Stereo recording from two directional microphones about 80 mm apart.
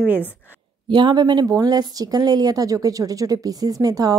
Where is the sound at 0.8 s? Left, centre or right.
Right.